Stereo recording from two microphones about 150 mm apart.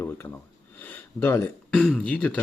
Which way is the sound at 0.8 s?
15° left (ahead or behind).